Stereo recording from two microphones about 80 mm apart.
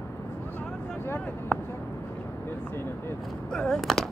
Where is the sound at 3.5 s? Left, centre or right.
Centre.